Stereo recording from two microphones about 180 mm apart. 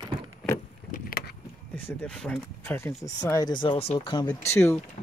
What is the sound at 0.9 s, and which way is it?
Vehicle, 55° left (ahead or behind).